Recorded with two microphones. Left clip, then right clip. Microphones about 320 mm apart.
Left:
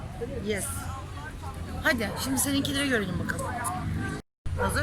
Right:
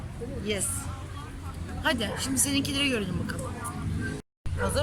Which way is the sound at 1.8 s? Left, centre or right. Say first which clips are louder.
Left 1 dB; centre.